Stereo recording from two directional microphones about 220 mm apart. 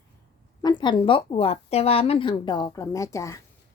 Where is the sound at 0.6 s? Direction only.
20° left (ahead or behind).